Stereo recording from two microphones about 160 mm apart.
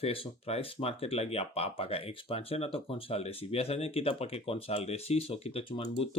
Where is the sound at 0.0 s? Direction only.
35° left (ahead or behind).